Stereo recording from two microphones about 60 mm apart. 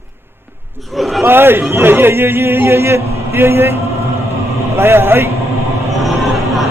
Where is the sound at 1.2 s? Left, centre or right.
Right.